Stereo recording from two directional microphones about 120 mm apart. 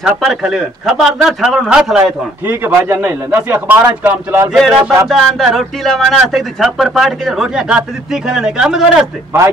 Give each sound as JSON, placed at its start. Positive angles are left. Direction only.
{"t": 0.0, "sound": "music", "side_deg": -5}
{"t": 2.4, "sound": "a man's voice", "side_deg": -20}
{"t": 4.5, "sound": "music", "side_deg": 0}
{"t": 9.3, "sound": "a man's voice", "side_deg": -20}